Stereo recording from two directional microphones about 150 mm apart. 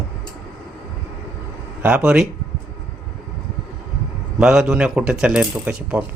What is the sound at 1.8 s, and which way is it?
Speech, 10° right (ahead or behind).